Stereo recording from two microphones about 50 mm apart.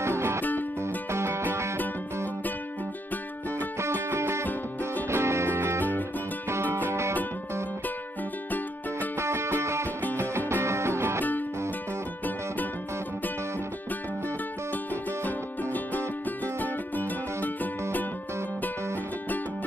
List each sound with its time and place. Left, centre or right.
0.0 s music: right
0.4 s music: left
1.1 s music: right
3.5 s music: right
9.2 s music: right
15.2 s music: left